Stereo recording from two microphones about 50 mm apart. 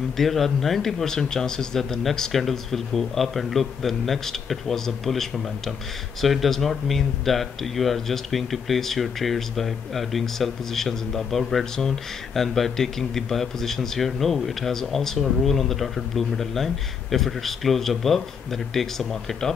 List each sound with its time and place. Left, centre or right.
0.2 s speech: centre